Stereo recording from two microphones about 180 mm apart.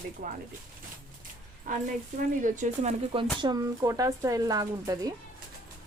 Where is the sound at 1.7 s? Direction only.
50° right (ahead or behind).